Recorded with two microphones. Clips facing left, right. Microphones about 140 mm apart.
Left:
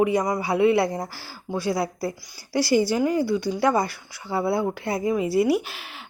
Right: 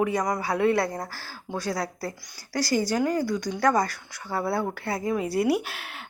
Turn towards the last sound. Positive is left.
turn(degrees=0)  # may be behind; listen again after turning